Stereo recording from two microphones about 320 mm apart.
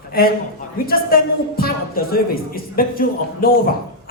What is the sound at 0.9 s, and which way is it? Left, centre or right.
A man's voice, left.